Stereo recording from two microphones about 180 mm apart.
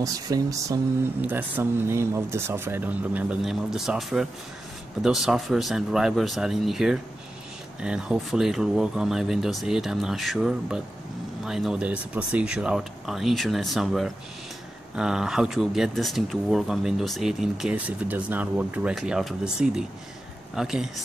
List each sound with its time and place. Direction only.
0.0 s speech: 20° right (ahead or behind); by 21.0 s centre (ahead or behind)